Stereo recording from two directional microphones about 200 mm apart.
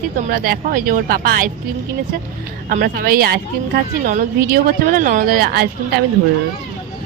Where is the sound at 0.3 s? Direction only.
50° right (ahead or behind).